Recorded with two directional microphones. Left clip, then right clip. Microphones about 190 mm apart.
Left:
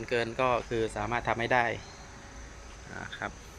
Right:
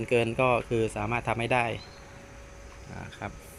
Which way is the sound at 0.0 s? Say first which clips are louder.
Right 4 dB; 15° right (ahead or behind).